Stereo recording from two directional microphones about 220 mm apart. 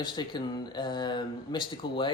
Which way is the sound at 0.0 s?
20° left (ahead or behind).